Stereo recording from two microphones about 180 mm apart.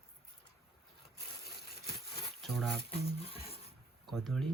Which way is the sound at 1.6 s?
60° left (ahead or behind).